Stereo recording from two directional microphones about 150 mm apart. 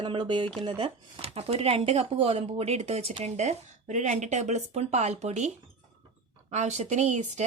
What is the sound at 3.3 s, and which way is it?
Speech, 50° right (ahead or behind).